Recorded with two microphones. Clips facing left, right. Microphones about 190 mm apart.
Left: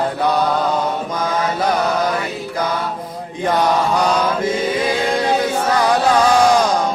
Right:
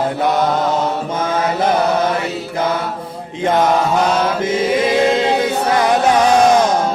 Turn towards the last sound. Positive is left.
turn(degrees=-25)  # may be behind; listen again after turning